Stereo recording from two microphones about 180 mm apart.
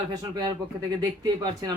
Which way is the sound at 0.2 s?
25° right (ahead or behind).